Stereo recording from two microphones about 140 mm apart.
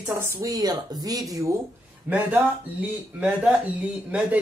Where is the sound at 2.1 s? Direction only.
15° right (ahead or behind).